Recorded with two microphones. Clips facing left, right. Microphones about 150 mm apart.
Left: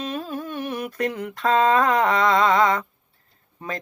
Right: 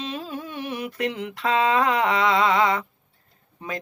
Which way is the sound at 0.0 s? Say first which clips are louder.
Left 3 dB; 45° left (ahead or behind).